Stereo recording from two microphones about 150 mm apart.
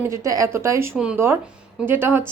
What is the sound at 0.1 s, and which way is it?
A woman's voice, 20° right (ahead or behind).